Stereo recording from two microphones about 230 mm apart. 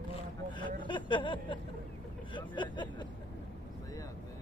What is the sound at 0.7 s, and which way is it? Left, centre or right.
Speech, left.